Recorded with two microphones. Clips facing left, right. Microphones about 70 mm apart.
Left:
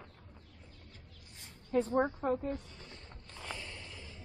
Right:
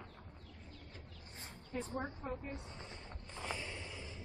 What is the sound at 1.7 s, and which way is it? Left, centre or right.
Speech, left.